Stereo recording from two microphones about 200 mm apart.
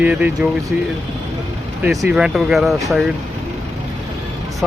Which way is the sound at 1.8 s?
Centre (ahead or behind).